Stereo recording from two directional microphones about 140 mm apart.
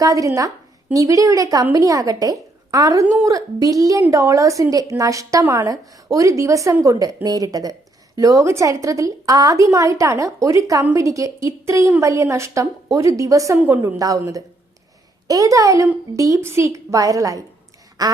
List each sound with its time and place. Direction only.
0.0 s a woman's voice: 25° right (ahead or behind)